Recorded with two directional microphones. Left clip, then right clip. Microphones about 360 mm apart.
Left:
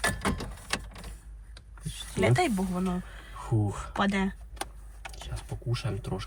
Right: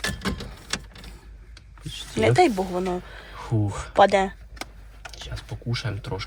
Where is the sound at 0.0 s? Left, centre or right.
Centre.